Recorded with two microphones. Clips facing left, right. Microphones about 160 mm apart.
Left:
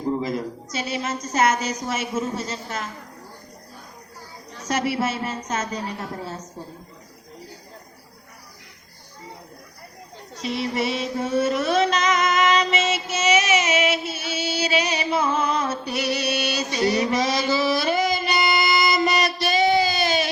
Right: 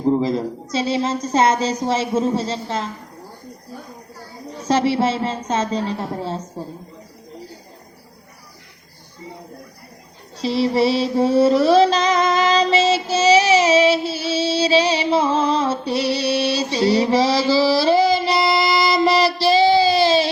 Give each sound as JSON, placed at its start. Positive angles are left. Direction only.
{"t": 0.0, "sound": "a woman's voice", "side_deg": -30}
{"t": 4.5, "sound": "a woman's voice", "side_deg": -30}
{"t": 10.3, "sound": "music", "side_deg": -30}